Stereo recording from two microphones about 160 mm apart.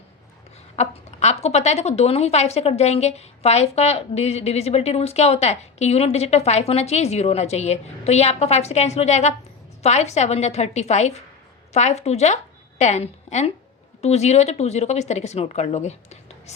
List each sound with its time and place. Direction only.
0.8 s a woman's voice: 45° left (ahead or behind)